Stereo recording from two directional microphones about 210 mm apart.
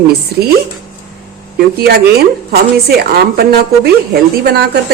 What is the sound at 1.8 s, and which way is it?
Speech, 50° right (ahead or behind).